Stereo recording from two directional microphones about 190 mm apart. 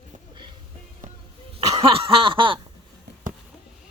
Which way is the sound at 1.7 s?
30° right (ahead or behind).